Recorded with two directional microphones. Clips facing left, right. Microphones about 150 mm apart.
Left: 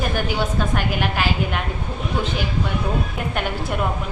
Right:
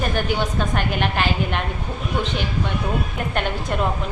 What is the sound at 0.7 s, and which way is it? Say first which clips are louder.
Speech: even; 5° left (ahead or behind).